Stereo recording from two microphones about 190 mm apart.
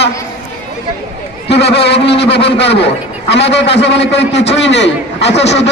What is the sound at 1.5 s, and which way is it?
A man's voice, 60° left (ahead or behind).